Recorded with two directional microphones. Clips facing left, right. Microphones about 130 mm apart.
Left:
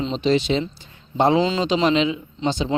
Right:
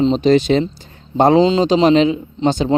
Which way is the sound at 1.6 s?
40° right (ahead or behind).